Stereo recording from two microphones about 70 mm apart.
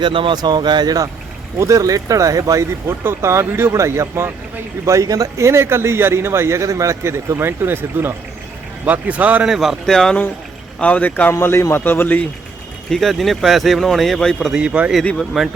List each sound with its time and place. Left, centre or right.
0.4 s speech: right
1.5 s speech: right
2.8 s a man's voice: right
4.9 s a man's voice: right
8.8 s speech: right
9.5 s speech: centre
9.8 s speech: centre
10.8 s a man's voice: centre
11.3 s a man's voice: left
12.9 s speech: centre
14.5 s a man's voice: centre
15.3 s speech: centre